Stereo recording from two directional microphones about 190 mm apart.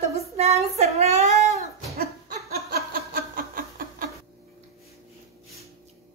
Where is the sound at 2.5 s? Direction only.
50° right (ahead or behind).